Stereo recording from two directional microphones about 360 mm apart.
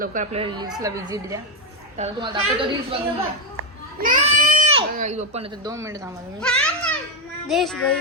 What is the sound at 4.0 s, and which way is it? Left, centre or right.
A woman's voice, right.